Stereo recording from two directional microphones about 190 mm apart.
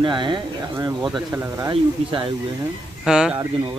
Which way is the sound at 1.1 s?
5° right (ahead or behind).